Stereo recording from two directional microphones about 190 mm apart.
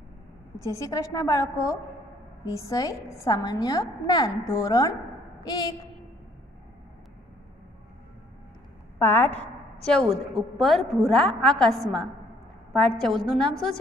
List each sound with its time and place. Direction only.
0.7 s a woman's voice: 15° left (ahead or behind)
8.9 s a woman's voice: 10° left (ahead or behind)
9.3 s a sound: 35° left (ahead or behind)
9.8 s a woman's voice: centre (ahead or behind)